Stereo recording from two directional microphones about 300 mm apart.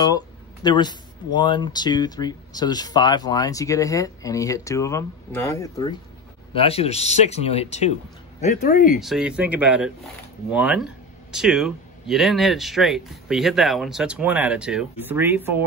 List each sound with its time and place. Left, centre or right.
0.7 s speech: centre
9.0 s speech: centre